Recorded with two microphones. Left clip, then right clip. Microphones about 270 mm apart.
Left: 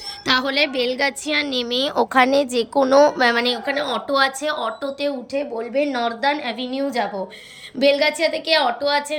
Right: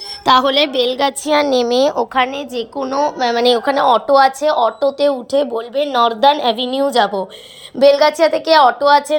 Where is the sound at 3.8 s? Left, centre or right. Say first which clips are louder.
Right 9 dB; centre.